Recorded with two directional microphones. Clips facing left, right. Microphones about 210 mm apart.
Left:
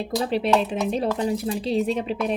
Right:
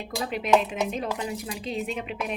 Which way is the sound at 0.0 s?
30° left (ahead or behind).